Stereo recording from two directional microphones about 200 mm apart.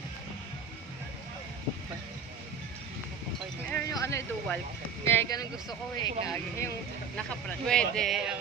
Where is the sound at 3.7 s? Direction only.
5° left (ahead or behind).